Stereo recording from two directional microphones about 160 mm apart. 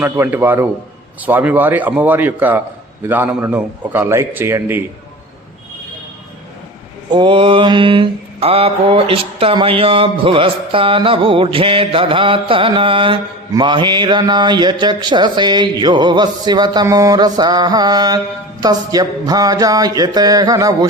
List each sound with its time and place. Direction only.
0.0 s a man's voice: 15° right (ahead or behind)
7.1 s mantra: 30° right (ahead or behind)
13.5 s speech: 30° right (ahead or behind)